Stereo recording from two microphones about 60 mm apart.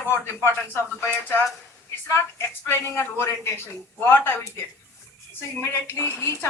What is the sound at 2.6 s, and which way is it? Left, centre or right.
Speech, left.